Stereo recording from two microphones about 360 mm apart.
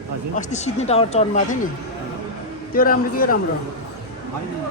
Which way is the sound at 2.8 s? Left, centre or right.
Left.